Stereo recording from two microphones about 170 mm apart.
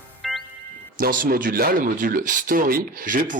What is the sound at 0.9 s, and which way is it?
Speech, 55° right (ahead or behind).